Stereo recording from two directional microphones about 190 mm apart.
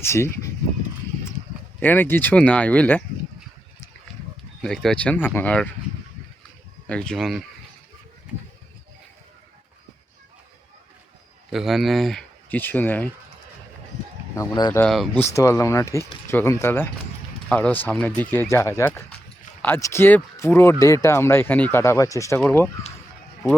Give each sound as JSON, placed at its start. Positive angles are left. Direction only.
{"t": 0.0, "sound": "speech", "side_deg": 15}
{"t": 1.8, "sound": "speech", "side_deg": 10}
{"t": 4.6, "sound": "speech", "side_deg": 5}
{"t": 6.8, "sound": "speech", "side_deg": 5}
{"t": 11.5, "sound": "speech", "side_deg": 0}
{"t": 14.3, "sound": "speech", "side_deg": 20}
{"t": 14.8, "sound": "speech", "side_deg": 5}
{"t": 15.2, "sound": "speech", "side_deg": 15}